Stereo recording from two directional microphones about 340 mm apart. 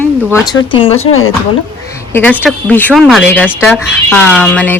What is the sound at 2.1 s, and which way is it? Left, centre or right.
Speech, centre.